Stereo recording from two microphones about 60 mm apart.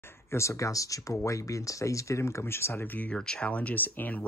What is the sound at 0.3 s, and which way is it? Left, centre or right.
Speech, left.